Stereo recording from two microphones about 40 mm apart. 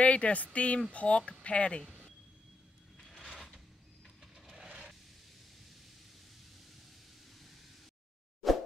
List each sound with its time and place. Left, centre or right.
0.0 s speech: left
8.4 s plop: centre